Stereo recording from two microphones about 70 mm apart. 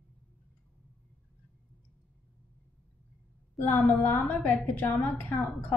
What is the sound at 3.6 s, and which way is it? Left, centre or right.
A woman's voice, left.